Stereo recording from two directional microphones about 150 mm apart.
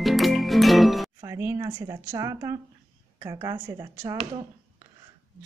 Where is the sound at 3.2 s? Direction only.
25° right (ahead or behind).